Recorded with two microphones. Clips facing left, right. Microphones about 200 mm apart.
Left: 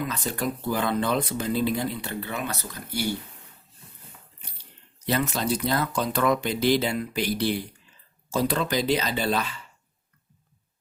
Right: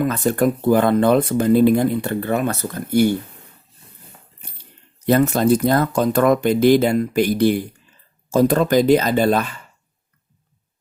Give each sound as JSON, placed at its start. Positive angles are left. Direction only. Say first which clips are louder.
{"t": 0.0, "sound": "speech", "louder": "right 11 dB", "side_deg": -50}
{"t": 5.0, "sound": "speech", "louder": "right 10 dB", "side_deg": -50}